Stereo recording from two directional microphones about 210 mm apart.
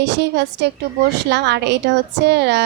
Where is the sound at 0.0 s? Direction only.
55° right (ahead or behind).